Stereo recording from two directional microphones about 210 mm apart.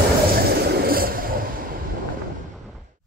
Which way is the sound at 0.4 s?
50° right (ahead or behind).